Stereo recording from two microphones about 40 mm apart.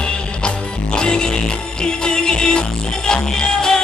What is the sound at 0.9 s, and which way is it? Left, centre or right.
Music, centre.